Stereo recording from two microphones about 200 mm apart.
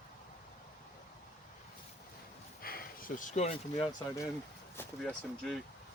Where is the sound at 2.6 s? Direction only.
45° left (ahead or behind).